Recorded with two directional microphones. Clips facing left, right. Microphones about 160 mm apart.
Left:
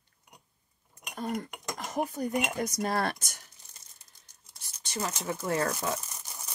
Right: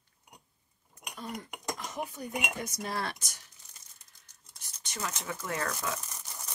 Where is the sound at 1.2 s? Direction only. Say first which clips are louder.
Left 7 dB; 45° left (ahead or behind).